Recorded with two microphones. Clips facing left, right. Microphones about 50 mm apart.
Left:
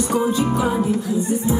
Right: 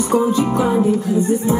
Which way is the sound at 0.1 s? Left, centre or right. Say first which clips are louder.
Right 5 dB; right.